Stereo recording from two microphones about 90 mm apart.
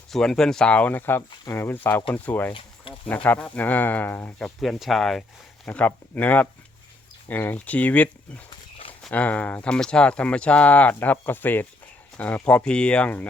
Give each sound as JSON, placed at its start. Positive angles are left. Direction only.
{"t": 0.1, "sound": "speech", "side_deg": 5}
{"t": 2.5, "sound": "a sound", "side_deg": 75}
{"t": 3.2, "sound": "speech", "side_deg": 15}
{"t": 4.4, "sound": "speech", "side_deg": 5}
{"t": 5.6, "sound": "speech", "side_deg": 15}
{"t": 9.1, "sound": "speech", "side_deg": 15}